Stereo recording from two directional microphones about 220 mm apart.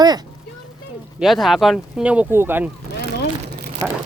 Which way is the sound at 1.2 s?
Centre (ahead or behind).